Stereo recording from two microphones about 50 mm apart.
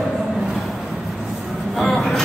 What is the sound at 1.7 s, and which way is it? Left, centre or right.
Vehicle, centre.